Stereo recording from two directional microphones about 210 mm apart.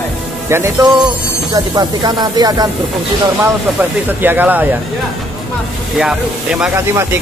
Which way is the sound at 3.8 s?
10° right (ahead or behind).